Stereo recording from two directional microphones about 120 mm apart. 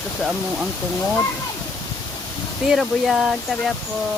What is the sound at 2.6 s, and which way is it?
Speech, centre (ahead or behind).